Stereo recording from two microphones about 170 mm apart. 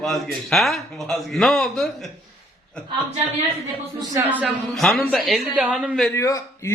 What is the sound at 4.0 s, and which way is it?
Speech, 20° right (ahead or behind).